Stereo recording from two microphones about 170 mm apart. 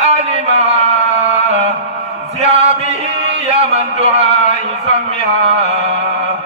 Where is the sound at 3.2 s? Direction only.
35° right (ahead or behind).